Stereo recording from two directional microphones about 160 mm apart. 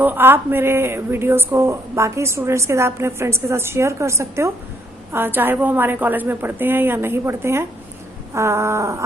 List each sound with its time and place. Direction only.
0.0 s speech: 10° right (ahead or behind)